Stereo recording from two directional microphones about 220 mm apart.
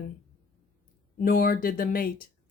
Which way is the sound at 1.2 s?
40° left (ahead or behind).